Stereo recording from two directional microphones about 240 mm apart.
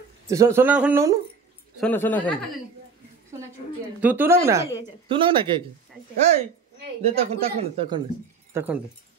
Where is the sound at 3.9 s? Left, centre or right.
Centre.